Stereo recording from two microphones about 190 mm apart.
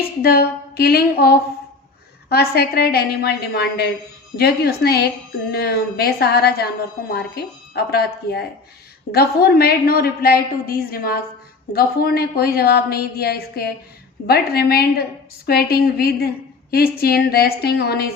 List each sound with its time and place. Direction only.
0.2 s a woman's voice: 55° left (ahead or behind)